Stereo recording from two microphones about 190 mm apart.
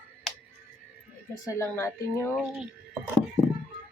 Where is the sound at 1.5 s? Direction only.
15° left (ahead or behind).